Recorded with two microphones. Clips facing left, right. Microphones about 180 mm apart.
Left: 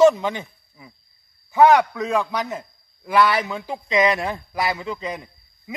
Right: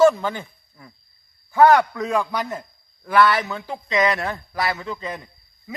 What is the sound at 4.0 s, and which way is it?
Speech, 25° left (ahead or behind).